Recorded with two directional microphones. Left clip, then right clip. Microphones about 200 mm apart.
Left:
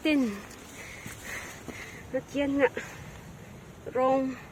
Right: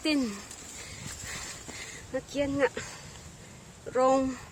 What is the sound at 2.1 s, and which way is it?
Speech, 15° right (ahead or behind).